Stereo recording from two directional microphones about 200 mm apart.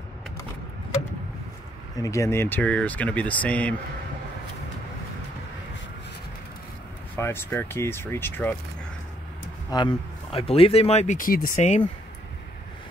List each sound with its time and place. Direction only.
2.0 s speech: 15° left (ahead or behind)
7.2 s speech: 10° left (ahead or behind)
9.7 s speech: 25° left (ahead or behind)